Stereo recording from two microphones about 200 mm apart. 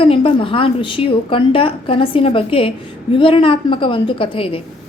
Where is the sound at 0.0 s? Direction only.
25° left (ahead or behind).